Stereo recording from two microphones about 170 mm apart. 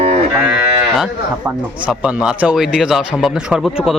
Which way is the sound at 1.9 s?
5° right (ahead or behind).